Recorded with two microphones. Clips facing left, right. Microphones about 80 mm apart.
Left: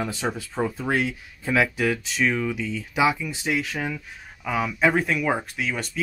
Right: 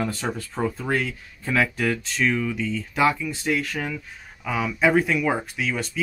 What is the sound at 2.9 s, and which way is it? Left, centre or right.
Speech, centre.